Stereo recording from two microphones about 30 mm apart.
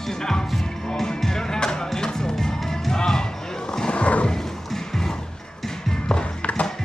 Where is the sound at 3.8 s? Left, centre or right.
Left.